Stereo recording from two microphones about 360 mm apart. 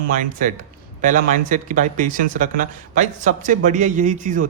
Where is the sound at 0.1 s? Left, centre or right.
Right.